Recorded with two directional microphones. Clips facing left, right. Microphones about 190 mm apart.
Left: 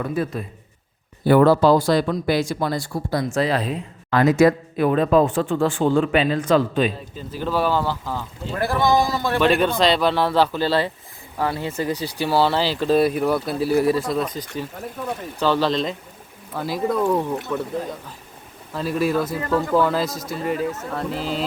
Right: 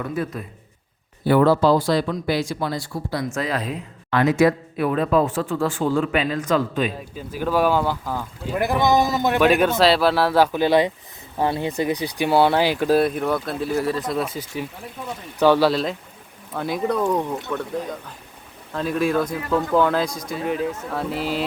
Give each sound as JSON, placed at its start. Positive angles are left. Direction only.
{"t": 1.2, "sound": "speech", "side_deg": 45}
{"t": 3.3, "sound": "speech", "side_deg": 30}
{"t": 7.2, "sound": "speech", "side_deg": -10}
{"t": 9.4, "sound": "speech", "side_deg": -10}
{"t": 13.0, "sound": "speech", "side_deg": 5}
{"t": 14.1, "sound": "speech", "side_deg": -5}
{"t": 18.7, "sound": "speech", "side_deg": 5}